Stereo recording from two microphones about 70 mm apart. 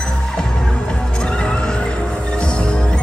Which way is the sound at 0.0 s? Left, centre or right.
Centre.